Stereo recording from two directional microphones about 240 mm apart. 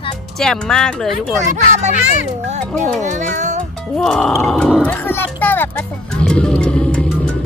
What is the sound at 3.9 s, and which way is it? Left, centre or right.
Speech, centre.